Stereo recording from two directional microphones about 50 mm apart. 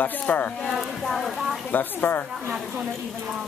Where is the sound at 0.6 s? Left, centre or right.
Centre.